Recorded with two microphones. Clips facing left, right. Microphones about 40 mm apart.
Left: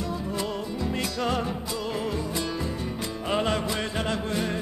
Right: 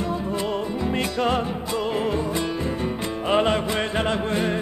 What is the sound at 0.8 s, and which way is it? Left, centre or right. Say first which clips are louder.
Music: right 4 dB; right.